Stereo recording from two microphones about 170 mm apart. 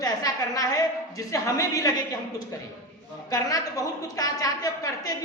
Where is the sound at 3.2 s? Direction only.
20° left (ahead or behind).